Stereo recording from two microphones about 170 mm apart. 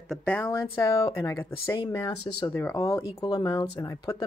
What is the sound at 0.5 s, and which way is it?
Speech, 20° left (ahead or behind).